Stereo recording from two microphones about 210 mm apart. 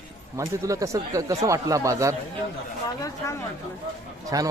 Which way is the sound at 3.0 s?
15° left (ahead or behind).